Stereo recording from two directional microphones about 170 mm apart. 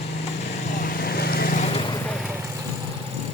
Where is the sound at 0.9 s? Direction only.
65° left (ahead or behind).